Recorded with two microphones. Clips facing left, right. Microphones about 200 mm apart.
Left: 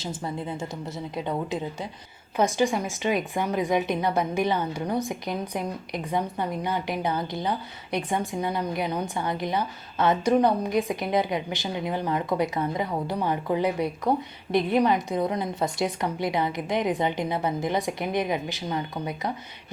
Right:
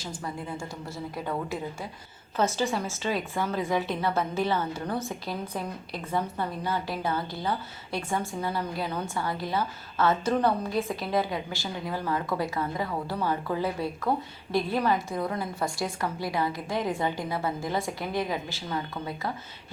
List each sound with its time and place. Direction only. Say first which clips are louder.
0.0 s a woman's voice: left 4 dB; 25° left (ahead or behind)